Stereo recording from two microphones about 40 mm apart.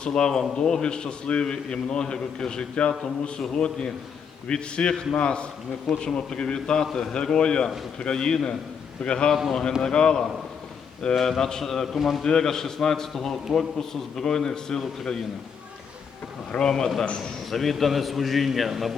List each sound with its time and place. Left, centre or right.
0.0 s a man's voice: centre
9.5 s a man's voice: centre
11.1 s a man's voice: centre
12.2 s a man's voice: centre
16.6 s a man's voice: centre
17.2 s a man's voice: centre